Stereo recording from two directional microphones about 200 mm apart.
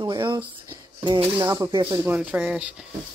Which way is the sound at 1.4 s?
20° right (ahead or behind).